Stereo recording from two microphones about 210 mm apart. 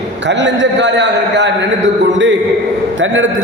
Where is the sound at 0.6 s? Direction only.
60° right (ahead or behind).